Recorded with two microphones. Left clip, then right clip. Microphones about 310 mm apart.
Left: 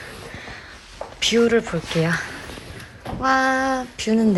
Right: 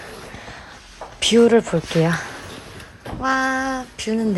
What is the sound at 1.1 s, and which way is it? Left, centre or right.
A woman's voice, centre.